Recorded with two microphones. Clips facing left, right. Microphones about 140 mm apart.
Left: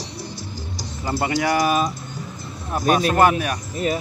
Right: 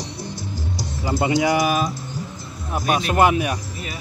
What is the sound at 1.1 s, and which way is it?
Speech, 20° right (ahead or behind).